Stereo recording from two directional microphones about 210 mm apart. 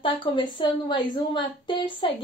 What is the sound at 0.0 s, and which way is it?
A woman's voice, 20° left (ahead or behind).